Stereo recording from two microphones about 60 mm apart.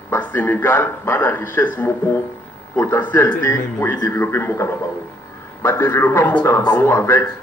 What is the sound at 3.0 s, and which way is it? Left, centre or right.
A man's voice, left.